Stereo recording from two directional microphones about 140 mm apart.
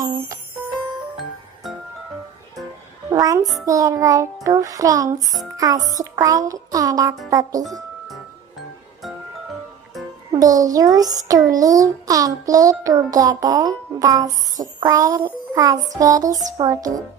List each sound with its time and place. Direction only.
3.1 s child singing: 25° right (ahead or behind)
10.4 s child singing: 25° right (ahead or behind)